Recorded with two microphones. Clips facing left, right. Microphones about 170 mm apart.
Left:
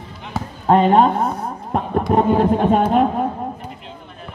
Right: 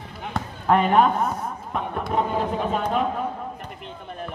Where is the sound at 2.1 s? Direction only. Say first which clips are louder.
Left 9 dB; 55° left (ahead or behind).